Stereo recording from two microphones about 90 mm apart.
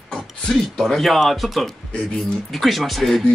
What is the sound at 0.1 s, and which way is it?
Speech, 5° left (ahead or behind).